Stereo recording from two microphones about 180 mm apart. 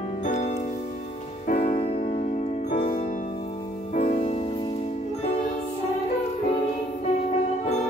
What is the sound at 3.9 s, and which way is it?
Music, 45° left (ahead or behind).